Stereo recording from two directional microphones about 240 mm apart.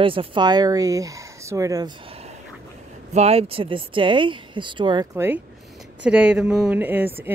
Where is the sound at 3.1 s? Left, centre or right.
Right.